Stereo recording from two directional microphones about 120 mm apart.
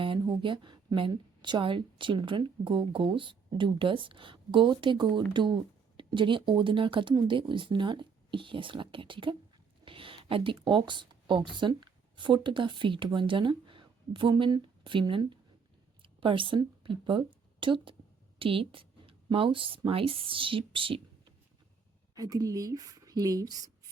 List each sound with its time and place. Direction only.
0.0 s a woman's voice: 45° right (ahead or behind)
22.1 s speech: 30° right (ahead or behind)